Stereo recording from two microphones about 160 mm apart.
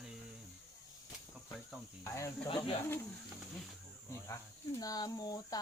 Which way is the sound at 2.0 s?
20° left (ahead or behind).